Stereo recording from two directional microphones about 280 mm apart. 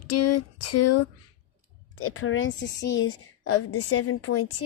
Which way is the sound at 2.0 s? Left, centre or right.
Left.